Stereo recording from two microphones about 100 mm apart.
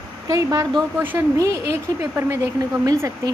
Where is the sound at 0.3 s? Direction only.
35° right (ahead or behind).